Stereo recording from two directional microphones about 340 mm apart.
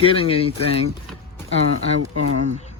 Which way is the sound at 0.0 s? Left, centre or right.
Centre.